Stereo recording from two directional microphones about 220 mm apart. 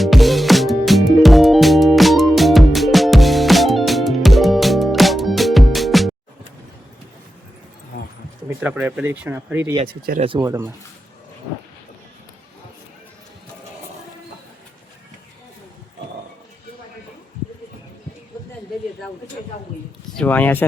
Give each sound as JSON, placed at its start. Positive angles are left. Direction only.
{"t": 0.0, "sound": "music", "side_deg": 0}
{"t": 8.4, "sound": "speech", "side_deg": -5}
{"t": 10.2, "sound": "speech", "side_deg": -25}
{"t": 10.4, "sound": "speech", "side_deg": -10}
{"t": 20.1, "sound": "speech", "side_deg": 5}